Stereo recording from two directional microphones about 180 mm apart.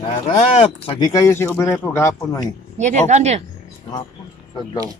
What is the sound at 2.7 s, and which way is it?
Speech, 40° right (ahead or behind).